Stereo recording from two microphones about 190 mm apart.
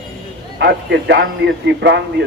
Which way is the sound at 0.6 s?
65° right (ahead or behind).